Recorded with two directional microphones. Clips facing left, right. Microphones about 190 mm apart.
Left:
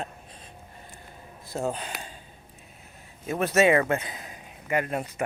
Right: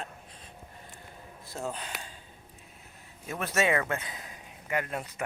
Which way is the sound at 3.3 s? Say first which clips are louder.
Left 7 dB; 20° left (ahead or behind).